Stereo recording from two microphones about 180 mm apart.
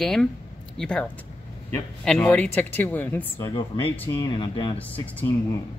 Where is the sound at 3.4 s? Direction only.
25° left (ahead or behind).